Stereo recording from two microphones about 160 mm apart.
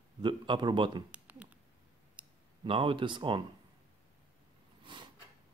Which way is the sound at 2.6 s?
30° right (ahead or behind).